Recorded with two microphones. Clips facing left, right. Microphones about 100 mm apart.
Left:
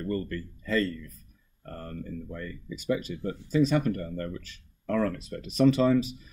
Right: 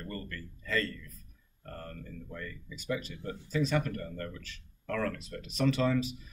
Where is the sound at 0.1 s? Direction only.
20° left (ahead or behind).